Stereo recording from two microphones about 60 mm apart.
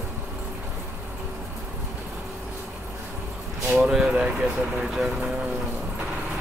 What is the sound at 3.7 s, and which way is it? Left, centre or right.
Speech, centre.